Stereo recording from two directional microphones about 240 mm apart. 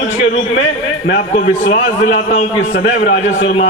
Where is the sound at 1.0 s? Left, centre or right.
Left.